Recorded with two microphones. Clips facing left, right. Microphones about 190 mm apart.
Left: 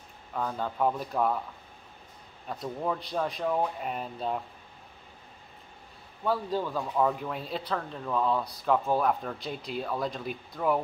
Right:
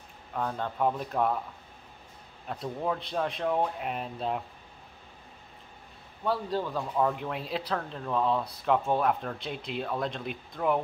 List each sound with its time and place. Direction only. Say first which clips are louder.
0.3 s speech: even; centre (ahead or behind)
2.4 s speech: even; centre (ahead or behind)
6.6 s speech: left 1 dB; centre (ahead or behind)